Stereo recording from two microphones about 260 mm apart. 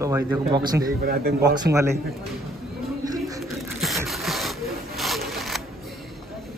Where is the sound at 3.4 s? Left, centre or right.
Centre.